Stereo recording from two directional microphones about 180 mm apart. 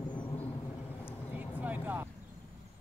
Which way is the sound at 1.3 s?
10° right (ahead or behind).